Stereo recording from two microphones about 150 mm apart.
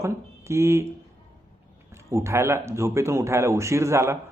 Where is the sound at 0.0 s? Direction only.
20° right (ahead or behind).